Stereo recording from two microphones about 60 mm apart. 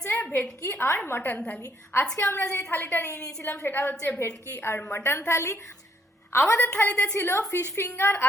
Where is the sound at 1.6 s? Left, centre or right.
Left.